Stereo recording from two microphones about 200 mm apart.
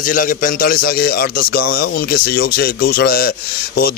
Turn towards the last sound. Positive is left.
turn(degrees=50)  # may be behind; listen again after turning